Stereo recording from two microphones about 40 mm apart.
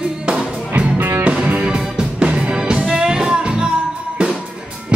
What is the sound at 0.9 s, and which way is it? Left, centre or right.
Music, right.